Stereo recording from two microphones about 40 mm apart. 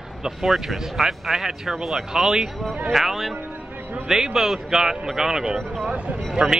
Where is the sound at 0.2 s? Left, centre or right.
Centre.